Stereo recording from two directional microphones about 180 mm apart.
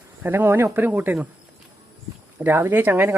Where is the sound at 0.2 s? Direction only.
10° right (ahead or behind).